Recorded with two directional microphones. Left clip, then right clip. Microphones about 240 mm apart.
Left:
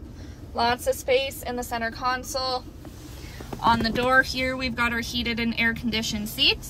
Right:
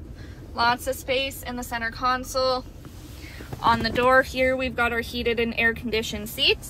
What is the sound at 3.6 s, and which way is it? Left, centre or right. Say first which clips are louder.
A woman's voice: right 2 dB; centre.